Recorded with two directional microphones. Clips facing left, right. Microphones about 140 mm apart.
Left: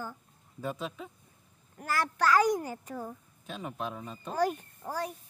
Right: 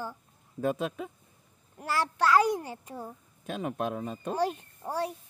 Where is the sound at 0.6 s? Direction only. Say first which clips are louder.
Right 6 dB; 60° right (ahead or behind).